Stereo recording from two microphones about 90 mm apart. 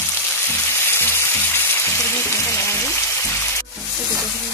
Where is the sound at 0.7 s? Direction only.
25° left (ahead or behind).